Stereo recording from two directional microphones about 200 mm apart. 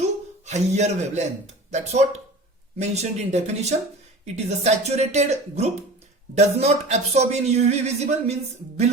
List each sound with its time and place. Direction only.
0.4 s speech: 35° right (ahead or behind)